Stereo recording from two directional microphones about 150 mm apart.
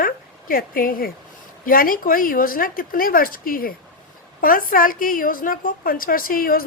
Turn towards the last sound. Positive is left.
turn(degrees=75)  # may be behind; listen again after turning